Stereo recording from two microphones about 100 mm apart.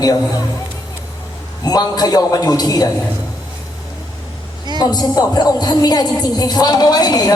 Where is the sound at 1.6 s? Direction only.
40° left (ahead or behind).